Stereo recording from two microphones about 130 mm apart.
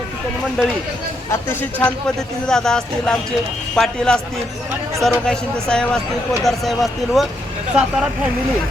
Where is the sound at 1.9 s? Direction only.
5° left (ahead or behind).